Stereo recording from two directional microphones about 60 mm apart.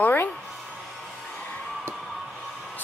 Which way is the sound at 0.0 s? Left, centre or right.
Left.